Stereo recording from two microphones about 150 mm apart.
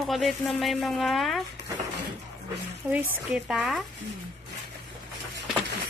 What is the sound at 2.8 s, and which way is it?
Speech, 15° right (ahead or behind).